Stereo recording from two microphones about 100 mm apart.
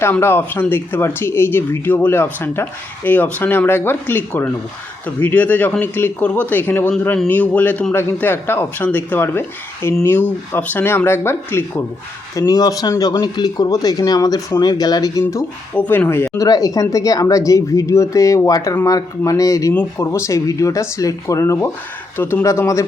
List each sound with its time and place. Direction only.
0.0 s speech: 25° left (ahead or behind)
12.4 s speech: 40° left (ahead or behind)
15.8 s speech: 20° left (ahead or behind)
16.4 s speech: 35° left (ahead or behind)